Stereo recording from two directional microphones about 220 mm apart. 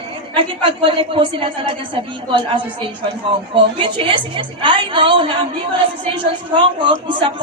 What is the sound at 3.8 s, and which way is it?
A woman's voice, 20° right (ahead or behind).